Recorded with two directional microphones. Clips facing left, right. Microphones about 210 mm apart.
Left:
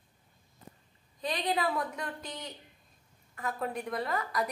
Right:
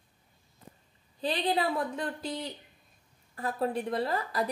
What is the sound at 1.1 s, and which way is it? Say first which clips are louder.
A woman's voice: right 3 dB; 30° right (ahead or behind).